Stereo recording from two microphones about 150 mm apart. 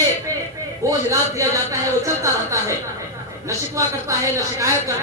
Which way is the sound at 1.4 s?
20° right (ahead or behind).